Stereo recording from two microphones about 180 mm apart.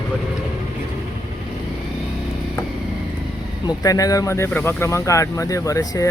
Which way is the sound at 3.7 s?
20° left (ahead or behind).